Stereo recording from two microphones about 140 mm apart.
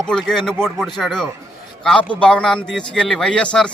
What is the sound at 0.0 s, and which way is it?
A man's voice, 5° left (ahead or behind).